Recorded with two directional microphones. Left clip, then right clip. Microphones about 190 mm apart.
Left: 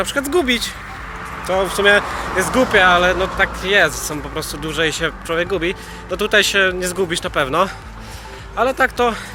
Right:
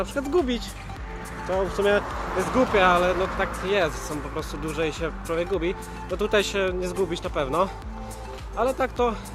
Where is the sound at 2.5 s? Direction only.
5° right (ahead or behind).